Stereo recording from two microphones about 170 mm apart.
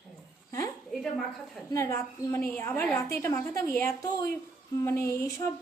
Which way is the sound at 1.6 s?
20° left (ahead or behind).